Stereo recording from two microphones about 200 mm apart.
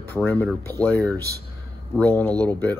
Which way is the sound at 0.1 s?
10° left (ahead or behind).